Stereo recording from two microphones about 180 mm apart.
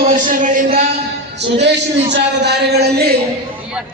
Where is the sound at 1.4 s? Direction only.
75° right (ahead or behind).